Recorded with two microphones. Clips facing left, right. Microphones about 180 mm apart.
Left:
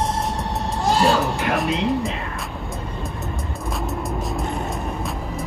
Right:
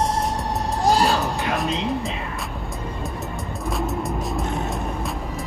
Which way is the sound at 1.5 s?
Centre (ahead or behind).